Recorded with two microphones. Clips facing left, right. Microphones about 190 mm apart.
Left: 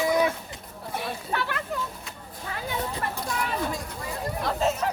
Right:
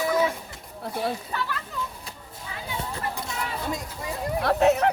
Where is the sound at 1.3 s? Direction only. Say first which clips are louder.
Left 2 dB; 65° left (ahead or behind).